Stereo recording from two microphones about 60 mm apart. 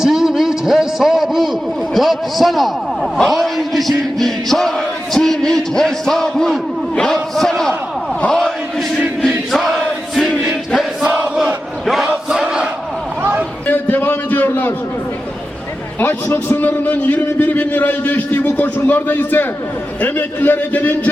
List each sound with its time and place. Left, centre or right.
0.0 s a man's voice: centre
8.3 s chant: centre
9.5 s battle cry: centre
11.0 s crowd: right
12.1 s crowd: centre
13.7 s a sound: left
16.0 s a man's voice: left